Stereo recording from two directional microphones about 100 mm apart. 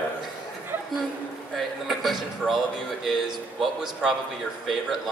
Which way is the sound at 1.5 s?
Centre (ahead or behind).